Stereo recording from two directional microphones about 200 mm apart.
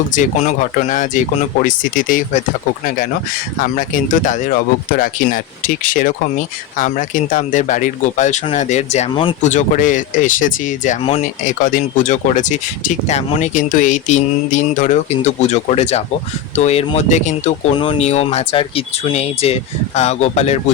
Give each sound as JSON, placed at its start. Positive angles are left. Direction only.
{"t": 0.1, "sound": "speech", "side_deg": 40}
{"t": 3.6, "sound": "speech", "side_deg": 40}